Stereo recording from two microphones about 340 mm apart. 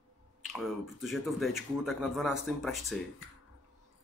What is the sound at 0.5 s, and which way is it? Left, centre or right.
Speech, centre.